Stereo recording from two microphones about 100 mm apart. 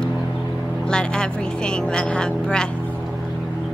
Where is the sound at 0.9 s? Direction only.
10° left (ahead or behind).